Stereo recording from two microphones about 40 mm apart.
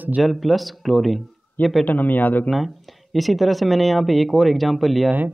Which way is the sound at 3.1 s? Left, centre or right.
Centre.